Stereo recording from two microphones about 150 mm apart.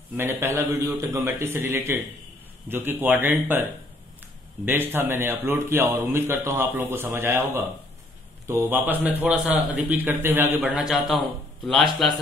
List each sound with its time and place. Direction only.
0.2 s speech: 15° right (ahead or behind)
4.6 s speech: 15° right (ahead or behind)